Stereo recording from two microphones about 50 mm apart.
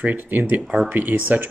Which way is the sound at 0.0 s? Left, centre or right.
Right.